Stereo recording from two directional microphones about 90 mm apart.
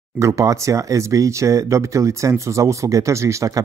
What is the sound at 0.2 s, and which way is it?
Speech, 35° right (ahead or behind).